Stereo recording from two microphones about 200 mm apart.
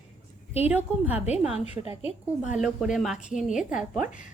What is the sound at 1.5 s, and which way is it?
A woman's voice, 30° left (ahead or behind).